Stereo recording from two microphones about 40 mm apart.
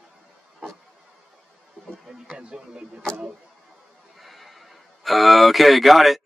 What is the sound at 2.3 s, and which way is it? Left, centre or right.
Speech, right.